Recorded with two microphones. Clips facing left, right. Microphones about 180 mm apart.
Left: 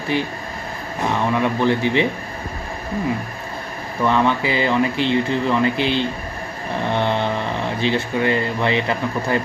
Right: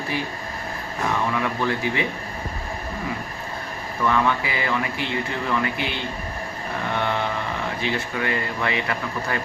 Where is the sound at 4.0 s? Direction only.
25° left (ahead or behind).